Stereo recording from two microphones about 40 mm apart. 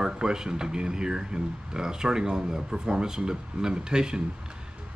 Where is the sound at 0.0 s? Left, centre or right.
Centre.